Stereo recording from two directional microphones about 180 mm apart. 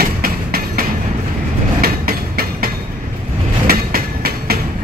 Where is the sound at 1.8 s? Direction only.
55° right (ahead or behind).